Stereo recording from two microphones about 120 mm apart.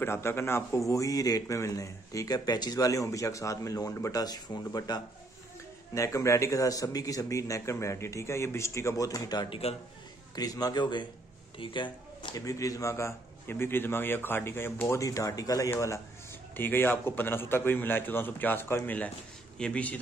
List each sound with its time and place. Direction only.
0.0 s a man's voice: 20° left (ahead or behind); by 12.4 s 40° left (ahead or behind)
12.4 s a man's voice: 30° left (ahead or behind); by 20.0 s 10° left (ahead or behind)